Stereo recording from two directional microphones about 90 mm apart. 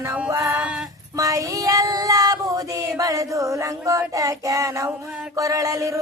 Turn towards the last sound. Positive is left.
turn(degrees=-40)  # may be behind; listen again after turning